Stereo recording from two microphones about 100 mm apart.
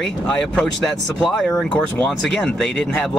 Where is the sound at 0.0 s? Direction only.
5° left (ahead or behind).